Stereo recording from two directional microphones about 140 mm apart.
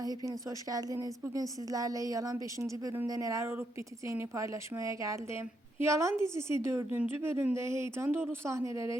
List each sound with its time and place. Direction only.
0.0 s speech: 25° right (ahead or behind)